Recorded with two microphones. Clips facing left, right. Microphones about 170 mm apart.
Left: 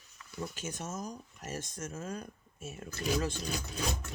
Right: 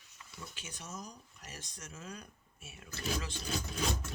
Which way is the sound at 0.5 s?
45° left (ahead or behind).